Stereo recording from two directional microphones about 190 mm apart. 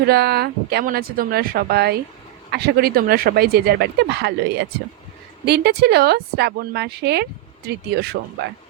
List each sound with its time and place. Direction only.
0.0 s speech: 55° right (ahead or behind)